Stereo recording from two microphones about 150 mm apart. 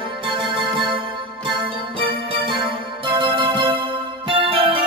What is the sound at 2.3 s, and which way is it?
Music, 35° right (ahead or behind).